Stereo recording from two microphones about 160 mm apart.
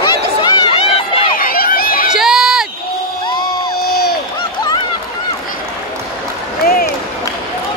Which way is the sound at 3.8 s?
75° left (ahead or behind).